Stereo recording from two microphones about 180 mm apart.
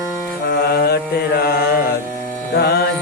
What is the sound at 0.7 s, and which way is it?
Mantra, 60° left (ahead or behind).